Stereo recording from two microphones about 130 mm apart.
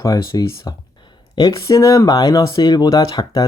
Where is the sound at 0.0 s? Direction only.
30° left (ahead or behind).